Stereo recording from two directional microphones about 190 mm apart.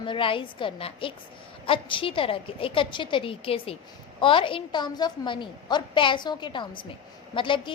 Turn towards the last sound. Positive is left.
turn(degrees=25)  # may be behind; listen again after turning